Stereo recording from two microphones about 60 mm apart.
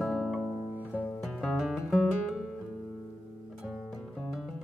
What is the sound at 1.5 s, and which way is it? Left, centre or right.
Guitar, centre.